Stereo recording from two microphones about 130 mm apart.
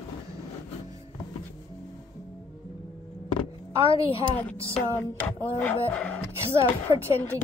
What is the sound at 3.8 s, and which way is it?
Speech, 45° left (ahead or behind).